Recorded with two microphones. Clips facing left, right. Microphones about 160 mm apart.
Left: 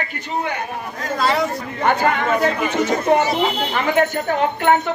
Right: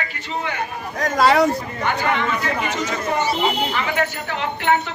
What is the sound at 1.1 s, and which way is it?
Speech, 65° right (ahead or behind).